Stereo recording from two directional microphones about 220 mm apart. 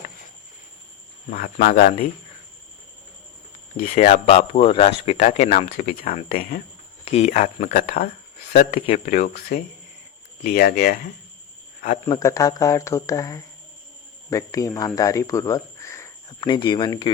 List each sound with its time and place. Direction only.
1.3 s speech: 35° left (ahead or behind)
3.8 s speech: 35° left (ahead or behind)
7.0 s speech: 30° left (ahead or behind)
12.0 s speech: 15° left (ahead or behind)